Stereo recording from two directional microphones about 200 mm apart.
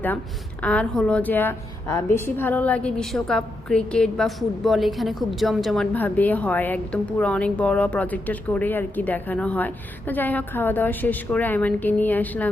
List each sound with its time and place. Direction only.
0.6 s a woman's voice: 5° left (ahead or behind)